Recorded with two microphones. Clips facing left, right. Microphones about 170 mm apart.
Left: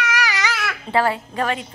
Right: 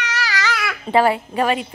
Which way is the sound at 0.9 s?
15° right (ahead or behind).